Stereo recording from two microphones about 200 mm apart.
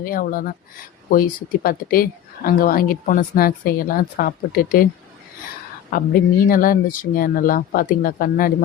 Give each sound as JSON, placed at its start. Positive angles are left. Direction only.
{"t": 0.0, "sound": "speech", "side_deg": 45}
{"t": 5.9, "sound": "speech", "side_deg": 45}